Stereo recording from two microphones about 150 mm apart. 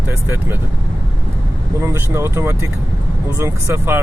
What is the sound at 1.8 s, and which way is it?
Speech, 15° right (ahead or behind).